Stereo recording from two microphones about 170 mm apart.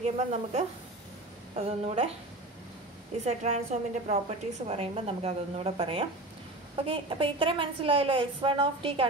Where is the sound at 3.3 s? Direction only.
40° right (ahead or behind).